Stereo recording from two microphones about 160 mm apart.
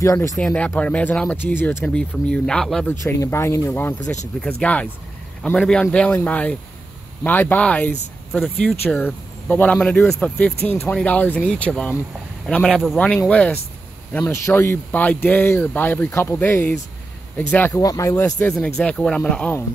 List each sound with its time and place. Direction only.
0.0 s speech: 20° left (ahead or behind); by 2.9 s 5° left (ahead or behind)
2.9 s speech: 15° left (ahead or behind)
18.8 s speech: 5° left (ahead or behind)